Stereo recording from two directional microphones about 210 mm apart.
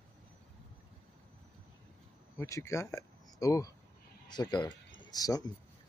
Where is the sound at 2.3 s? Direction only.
15° left (ahead or behind).